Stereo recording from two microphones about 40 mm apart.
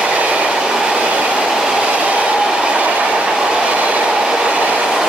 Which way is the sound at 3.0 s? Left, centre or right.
Centre.